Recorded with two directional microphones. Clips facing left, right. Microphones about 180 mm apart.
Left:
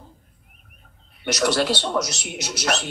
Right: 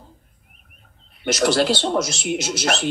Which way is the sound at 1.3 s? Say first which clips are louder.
Right 3 dB; 30° right (ahead or behind).